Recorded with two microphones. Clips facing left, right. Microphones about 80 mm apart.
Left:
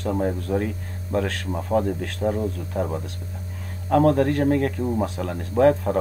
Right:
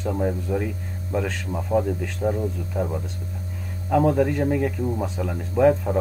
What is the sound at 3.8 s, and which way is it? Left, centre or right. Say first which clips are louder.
Speech: left 1 dB; left.